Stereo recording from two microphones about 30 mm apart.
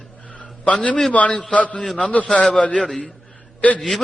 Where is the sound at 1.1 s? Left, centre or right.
Left.